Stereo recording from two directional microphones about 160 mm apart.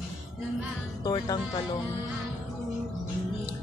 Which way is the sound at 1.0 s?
25° left (ahead or behind).